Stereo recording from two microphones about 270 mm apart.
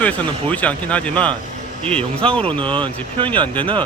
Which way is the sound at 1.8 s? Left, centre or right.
Right.